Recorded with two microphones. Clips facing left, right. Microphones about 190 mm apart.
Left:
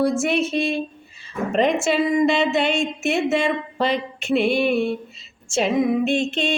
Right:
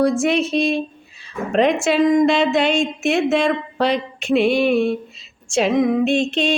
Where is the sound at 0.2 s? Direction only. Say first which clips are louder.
Right 3 dB; 5° left (ahead or behind).